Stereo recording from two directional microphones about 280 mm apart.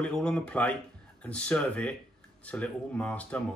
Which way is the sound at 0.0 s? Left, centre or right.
Centre.